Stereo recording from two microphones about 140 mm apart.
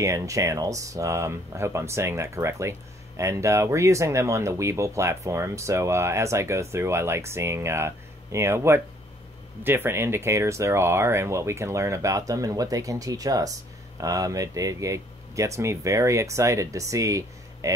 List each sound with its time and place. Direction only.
0.0 s speech: 20° right (ahead or behind)